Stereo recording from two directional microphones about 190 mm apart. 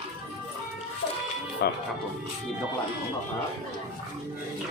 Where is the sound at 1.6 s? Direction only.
60° left (ahead or behind).